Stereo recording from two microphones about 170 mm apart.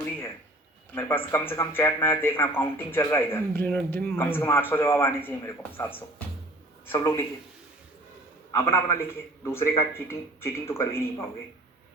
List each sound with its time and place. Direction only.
0.9 s speech: 15° left (ahead or behind)
8.5 s speech: 15° left (ahead or behind)